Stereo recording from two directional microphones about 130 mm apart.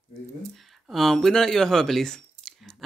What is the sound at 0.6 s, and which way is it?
Speech, centre (ahead or behind).